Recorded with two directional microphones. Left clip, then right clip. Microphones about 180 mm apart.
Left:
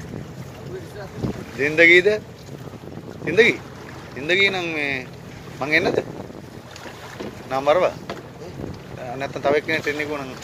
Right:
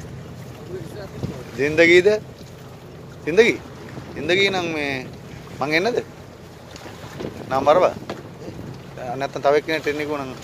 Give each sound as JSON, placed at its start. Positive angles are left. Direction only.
{"t": 1.6, "sound": "speech", "side_deg": -25}
{"t": 3.3, "sound": "speech", "side_deg": -25}
{"t": 7.4, "sound": "speech", "side_deg": -25}
{"t": 9.1, "sound": "speech", "side_deg": -25}